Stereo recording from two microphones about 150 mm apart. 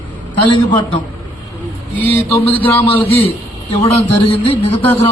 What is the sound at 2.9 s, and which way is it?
Speech, 40° left (ahead or behind).